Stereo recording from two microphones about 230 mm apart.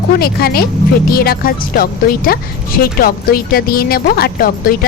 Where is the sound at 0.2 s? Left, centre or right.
Left.